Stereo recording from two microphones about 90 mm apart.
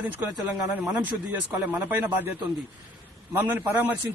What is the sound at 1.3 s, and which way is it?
Speech, 20° right (ahead or behind).